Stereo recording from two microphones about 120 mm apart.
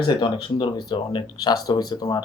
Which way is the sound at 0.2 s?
40° left (ahead or behind).